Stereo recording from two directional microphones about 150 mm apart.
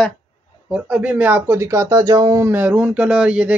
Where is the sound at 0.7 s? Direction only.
10° right (ahead or behind).